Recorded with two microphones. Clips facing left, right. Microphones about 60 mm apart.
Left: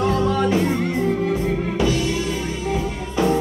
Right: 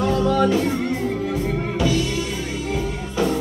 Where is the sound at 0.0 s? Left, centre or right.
Left.